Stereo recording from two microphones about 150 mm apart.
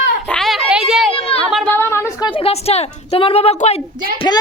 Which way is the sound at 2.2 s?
35° left (ahead or behind).